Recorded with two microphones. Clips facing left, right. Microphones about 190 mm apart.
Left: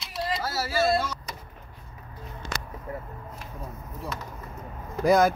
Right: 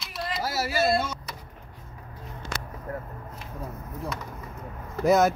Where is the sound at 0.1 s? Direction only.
30° left (ahead or behind).